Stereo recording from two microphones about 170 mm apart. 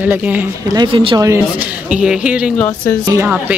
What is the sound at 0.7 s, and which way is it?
Speech, 25° right (ahead or behind).